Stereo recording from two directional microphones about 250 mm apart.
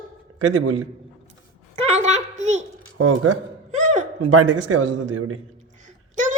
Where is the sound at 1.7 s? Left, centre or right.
Right.